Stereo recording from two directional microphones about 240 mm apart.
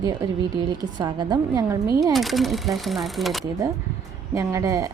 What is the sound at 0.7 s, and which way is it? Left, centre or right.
A woman's voice, centre.